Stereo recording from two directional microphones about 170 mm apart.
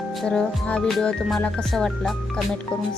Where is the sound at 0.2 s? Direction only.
5° left (ahead or behind).